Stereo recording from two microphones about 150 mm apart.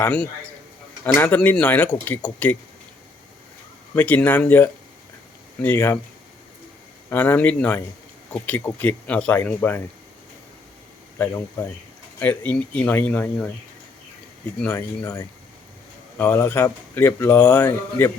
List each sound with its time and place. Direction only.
0.0 s speech: 10° left (ahead or behind)
3.9 s speech: 10° left (ahead or behind)
7.1 s speech: 15° left (ahead or behind)
12.2 s speech: 10° left (ahead or behind)
14.6 s speech: 15° left (ahead or behind)